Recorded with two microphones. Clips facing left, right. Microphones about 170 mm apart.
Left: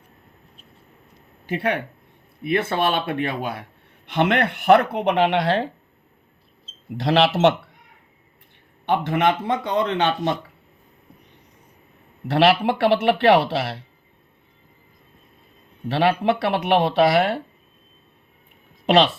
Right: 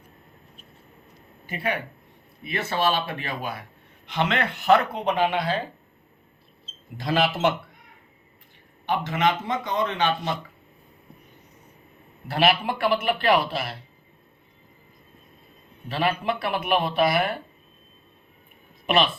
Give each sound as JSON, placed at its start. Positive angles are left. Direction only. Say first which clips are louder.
{"t": 1.5, "sound": "speech", "louder": "left 5 dB", "side_deg": 75}
{"t": 2.4, "sound": "a man's voice", "louder": "left 4 dB", "side_deg": 55}
{"t": 6.9, "sound": "speech", "louder": "left 5 dB", "side_deg": 75}
{"t": 8.9, "sound": "speech", "louder": "left 4 dB", "side_deg": 60}
{"t": 12.3, "sound": "speech", "louder": "left 5 dB", "side_deg": 75}
{"t": 15.9, "sound": "speech", "louder": "left 6 dB", "side_deg": 75}
{"t": 18.9, "sound": "speech", "louder": "left 5 dB", "side_deg": 80}